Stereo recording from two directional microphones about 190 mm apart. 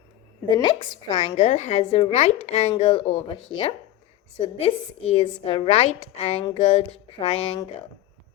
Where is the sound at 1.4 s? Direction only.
35° left (ahead or behind).